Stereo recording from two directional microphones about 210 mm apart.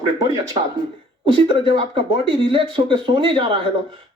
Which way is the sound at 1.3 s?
25° right (ahead or behind).